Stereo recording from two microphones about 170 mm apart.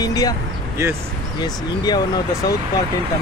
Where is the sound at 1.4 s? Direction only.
25° left (ahead or behind).